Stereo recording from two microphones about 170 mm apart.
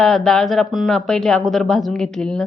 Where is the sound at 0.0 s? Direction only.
5° left (ahead or behind).